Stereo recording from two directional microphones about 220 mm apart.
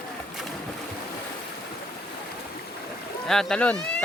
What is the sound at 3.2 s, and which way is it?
Speech, centre (ahead or behind).